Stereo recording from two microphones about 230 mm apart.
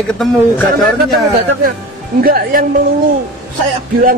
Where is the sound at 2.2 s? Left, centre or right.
Right.